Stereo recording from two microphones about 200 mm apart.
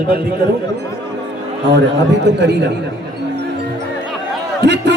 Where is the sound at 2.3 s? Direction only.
60° right (ahead or behind).